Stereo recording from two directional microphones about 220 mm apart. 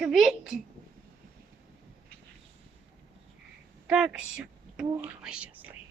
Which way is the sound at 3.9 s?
5° right (ahead or behind).